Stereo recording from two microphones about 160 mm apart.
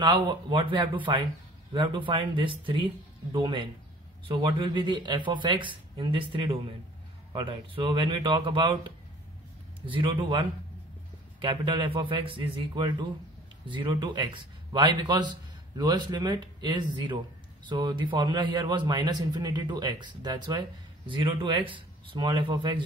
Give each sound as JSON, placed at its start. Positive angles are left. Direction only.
{"t": 0.0, "sound": "a man's voice", "side_deg": -25}
{"t": 9.8, "sound": "a man's voice", "side_deg": -30}
{"t": 11.4, "sound": "a man's voice", "side_deg": -30}